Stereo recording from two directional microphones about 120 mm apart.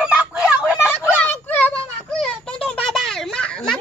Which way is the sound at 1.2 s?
15° left (ahead or behind).